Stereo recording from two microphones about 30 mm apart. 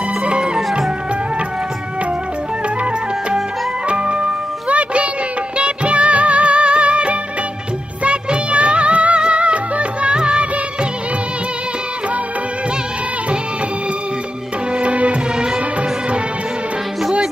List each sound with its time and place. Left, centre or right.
3.9 s music: right
4.6 s music: right
8.0 s music of bollywood: right
9.2 s music: right
10.1 s music of bollywood: right
14.8 s music: right